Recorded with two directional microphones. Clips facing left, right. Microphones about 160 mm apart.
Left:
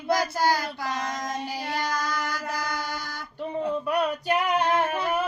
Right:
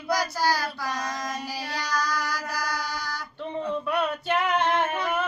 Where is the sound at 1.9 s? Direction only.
25° left (ahead or behind).